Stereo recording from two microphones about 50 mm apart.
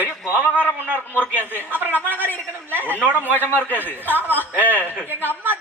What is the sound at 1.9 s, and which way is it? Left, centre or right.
A woman's voice, left.